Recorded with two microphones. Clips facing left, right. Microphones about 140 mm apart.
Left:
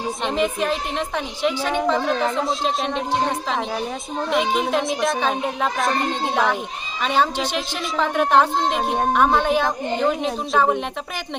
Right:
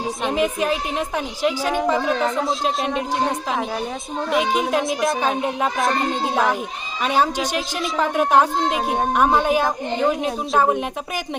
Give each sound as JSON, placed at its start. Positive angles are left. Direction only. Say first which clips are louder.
{"t": 0.3, "sound": "a woman's voice", "louder": "right 1 dB", "side_deg": -5}